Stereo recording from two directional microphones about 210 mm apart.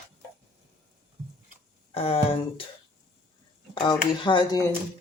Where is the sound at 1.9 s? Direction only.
25° left (ahead or behind).